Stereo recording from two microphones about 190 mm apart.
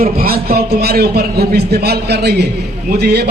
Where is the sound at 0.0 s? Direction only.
50° right (ahead or behind).